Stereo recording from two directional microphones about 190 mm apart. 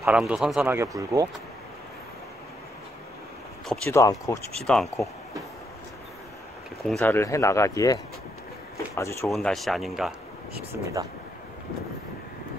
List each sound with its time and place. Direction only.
0.0 s speech: 5° right (ahead or behind)
3.6 s speech: 5° left (ahead or behind)
3.9 s speech: 15° left (ahead or behind)
4.6 s speech: 5° left (ahead or behind)
6.9 s speech: 10° left (ahead or behind)
9.3 s speech: centre (ahead or behind)
10.7 s speech: 15° right (ahead or behind)